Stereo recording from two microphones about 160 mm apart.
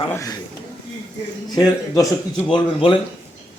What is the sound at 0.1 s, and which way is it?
Speech, 20° left (ahead or behind).